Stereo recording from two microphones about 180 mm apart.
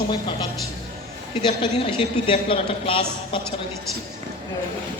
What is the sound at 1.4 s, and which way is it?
A man's voice, 30° left (ahead or behind).